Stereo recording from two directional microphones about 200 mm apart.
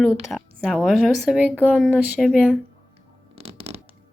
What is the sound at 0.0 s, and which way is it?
Speech, 10° left (ahead or behind).